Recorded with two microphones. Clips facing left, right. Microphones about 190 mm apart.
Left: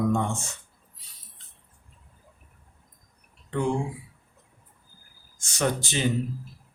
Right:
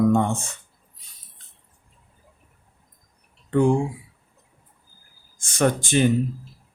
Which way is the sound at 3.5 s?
50° right (ahead or behind).